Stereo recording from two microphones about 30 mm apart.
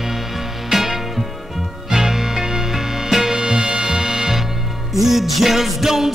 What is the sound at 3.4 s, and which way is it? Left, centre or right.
Music, right.